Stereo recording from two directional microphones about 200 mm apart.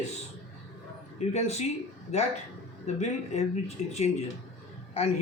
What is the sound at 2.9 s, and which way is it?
A man's voice, 35° left (ahead or behind).